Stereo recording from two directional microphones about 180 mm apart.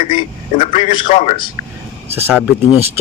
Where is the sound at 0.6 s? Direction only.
30° left (ahead or behind).